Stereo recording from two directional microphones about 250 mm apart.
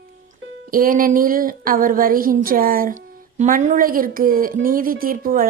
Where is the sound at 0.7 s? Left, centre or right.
Right.